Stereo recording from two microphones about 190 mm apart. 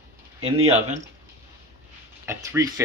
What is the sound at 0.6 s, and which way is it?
Speech, 35° right (ahead or behind).